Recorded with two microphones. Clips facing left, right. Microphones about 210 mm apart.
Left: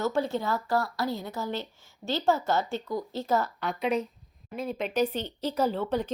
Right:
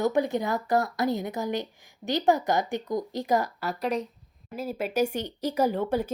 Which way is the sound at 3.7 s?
Centre (ahead or behind).